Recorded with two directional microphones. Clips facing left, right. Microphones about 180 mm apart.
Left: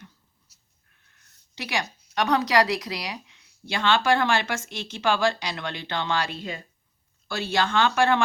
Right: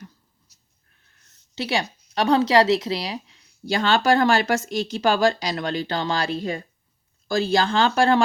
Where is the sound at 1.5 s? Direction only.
30° right (ahead or behind).